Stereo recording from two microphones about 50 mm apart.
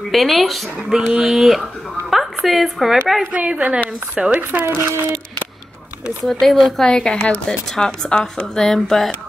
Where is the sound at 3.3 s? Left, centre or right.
Right.